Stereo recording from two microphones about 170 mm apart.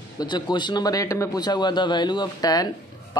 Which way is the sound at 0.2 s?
25° left (ahead or behind).